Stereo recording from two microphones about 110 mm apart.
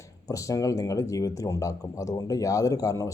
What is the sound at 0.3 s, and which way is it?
Speech, 30° left (ahead or behind).